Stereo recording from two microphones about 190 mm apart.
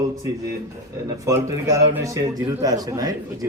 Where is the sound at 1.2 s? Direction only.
15° right (ahead or behind).